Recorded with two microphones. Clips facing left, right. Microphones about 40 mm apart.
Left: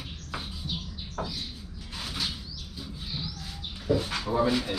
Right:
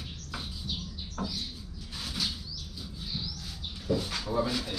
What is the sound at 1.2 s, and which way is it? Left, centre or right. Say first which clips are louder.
Bird: left 2 dB; left.